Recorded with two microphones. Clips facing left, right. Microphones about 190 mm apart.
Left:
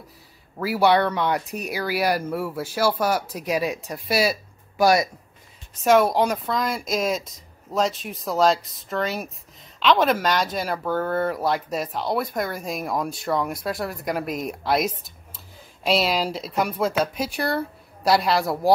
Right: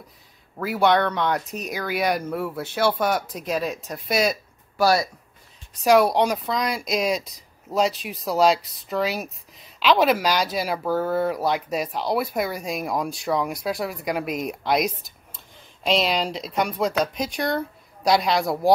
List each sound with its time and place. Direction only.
0.6 s speech: 5° left (ahead or behind)
5.8 s speech: centre (ahead or behind)